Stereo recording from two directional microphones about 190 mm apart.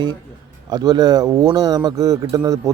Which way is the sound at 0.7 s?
20° right (ahead or behind).